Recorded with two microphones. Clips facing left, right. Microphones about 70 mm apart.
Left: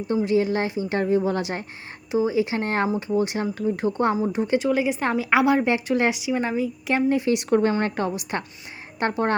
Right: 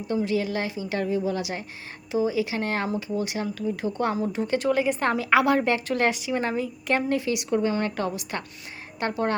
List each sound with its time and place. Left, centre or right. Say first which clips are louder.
0.3 s speech: left 5 dB; left
4.1 s speech: left 3 dB; centre
4.6 s a woman's voice: left 1 dB; centre
7.3 s speech: left 4 dB; left